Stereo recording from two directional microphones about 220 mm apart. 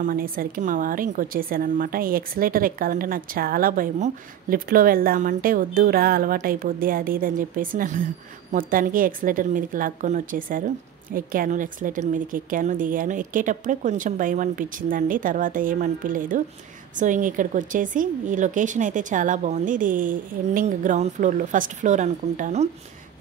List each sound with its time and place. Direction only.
0.0 s a woman's voice: 40° right (ahead or behind)